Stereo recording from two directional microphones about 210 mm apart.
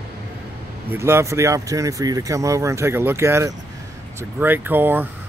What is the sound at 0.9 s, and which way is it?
Speech, 10° right (ahead or behind).